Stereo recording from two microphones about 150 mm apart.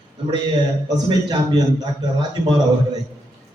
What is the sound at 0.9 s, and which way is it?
A man's voice, 25° right (ahead or behind).